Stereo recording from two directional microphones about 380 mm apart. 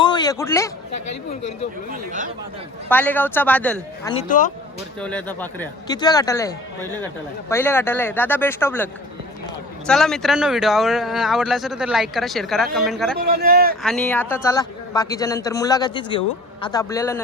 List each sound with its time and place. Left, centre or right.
0.0 s a sound: centre
1.3 s a man's voice: centre
1.9 s speech: right
2.9 s speech: centre
4.1 s speech: centre
4.9 s a man's voice: centre
7.5 s speech: centre
13.1 s speech: right
13.8 s a man's voice: centre